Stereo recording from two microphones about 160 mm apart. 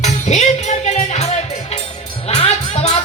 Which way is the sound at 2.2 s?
40° left (ahead or behind).